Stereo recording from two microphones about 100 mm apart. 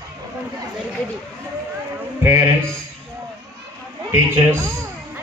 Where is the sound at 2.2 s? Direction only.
25° right (ahead or behind).